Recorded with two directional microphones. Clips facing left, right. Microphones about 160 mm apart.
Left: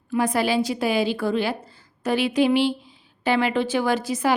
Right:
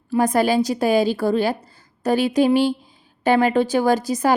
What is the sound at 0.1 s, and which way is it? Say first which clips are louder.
A woman's voice: right 4 dB; 45° right (ahead or behind).